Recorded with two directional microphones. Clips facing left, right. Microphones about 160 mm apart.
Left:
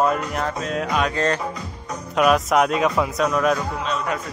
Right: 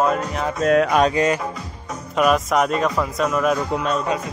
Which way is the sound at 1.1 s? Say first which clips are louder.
Right 3 dB; 15° right (ahead or behind).